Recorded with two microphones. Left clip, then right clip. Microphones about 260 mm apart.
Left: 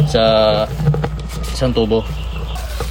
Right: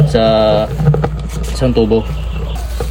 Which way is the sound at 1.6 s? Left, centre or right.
Left.